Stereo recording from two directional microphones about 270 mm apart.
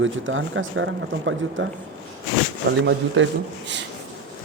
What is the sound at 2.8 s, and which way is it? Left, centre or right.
Speech, right.